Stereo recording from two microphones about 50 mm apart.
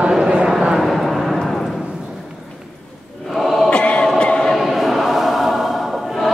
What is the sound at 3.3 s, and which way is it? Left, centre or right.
Choir, centre.